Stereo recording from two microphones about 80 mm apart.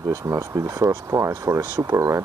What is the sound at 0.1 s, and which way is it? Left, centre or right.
Speech, right.